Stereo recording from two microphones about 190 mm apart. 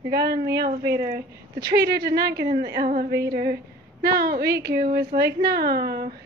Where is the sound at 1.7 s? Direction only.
55° right (ahead or behind).